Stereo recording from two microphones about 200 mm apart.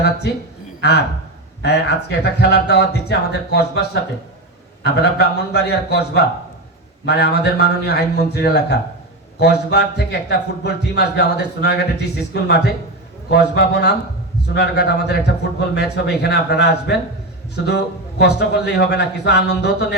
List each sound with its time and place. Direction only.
0.8 s a man's voice: 55° left (ahead or behind)